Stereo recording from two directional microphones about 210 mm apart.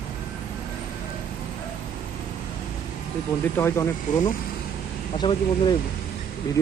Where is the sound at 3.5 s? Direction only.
10° left (ahead or behind).